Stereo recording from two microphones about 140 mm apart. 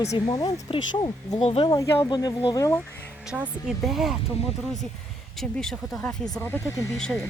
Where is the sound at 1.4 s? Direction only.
45° left (ahead or behind).